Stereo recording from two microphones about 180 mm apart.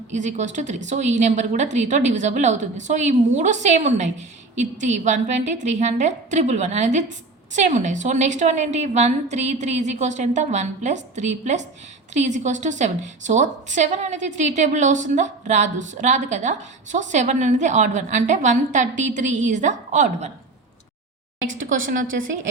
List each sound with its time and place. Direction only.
0.1 s a woman's voice: 40° right (ahead or behind)
22.0 s a woman's voice: 90° right